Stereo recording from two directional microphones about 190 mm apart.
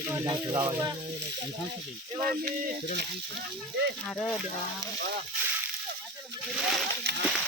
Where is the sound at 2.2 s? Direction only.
50° right (ahead or behind).